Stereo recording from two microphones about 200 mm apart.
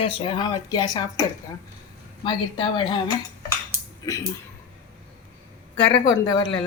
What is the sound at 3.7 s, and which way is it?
Dishes, 15° right (ahead or behind).